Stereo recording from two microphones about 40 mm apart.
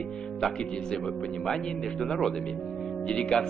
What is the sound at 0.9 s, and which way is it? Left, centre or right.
Speech, centre.